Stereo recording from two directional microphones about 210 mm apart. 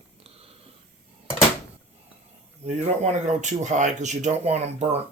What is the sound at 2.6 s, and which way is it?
Speech, 30° right (ahead or behind).